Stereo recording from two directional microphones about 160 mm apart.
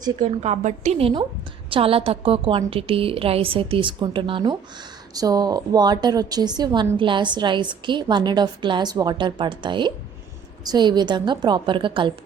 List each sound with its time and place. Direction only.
0.2 s a woman's voice: 45° right (ahead or behind); by 12.1 s 30° right (ahead or behind)